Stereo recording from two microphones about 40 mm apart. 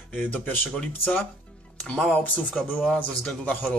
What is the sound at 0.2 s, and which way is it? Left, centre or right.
Speech, left.